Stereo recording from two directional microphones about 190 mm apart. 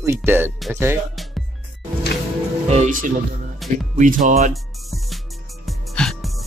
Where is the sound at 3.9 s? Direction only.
45° right (ahead or behind).